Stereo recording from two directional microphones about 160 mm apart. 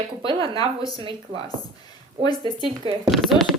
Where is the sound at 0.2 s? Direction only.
30° right (ahead or behind).